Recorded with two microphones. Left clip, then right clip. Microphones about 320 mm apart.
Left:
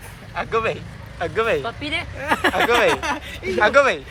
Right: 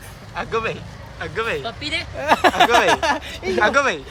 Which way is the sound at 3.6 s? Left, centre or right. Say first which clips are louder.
Left 2 dB; centre.